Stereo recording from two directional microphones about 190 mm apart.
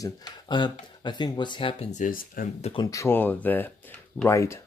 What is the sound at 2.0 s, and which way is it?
Speech, 45° left (ahead or behind).